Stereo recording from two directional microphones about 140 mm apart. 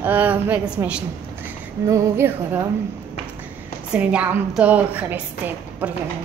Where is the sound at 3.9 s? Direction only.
10° right (ahead or behind).